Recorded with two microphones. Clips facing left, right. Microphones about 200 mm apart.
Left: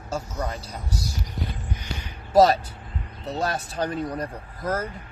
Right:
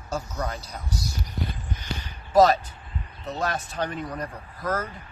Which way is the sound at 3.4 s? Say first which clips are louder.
Left 1 dB; 35° left (ahead or behind).